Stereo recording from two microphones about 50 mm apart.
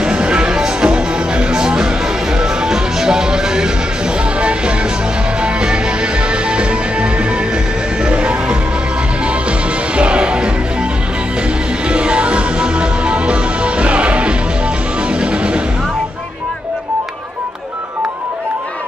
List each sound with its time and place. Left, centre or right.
0.0 s music: centre
9.9 s music: right
11.9 s music: right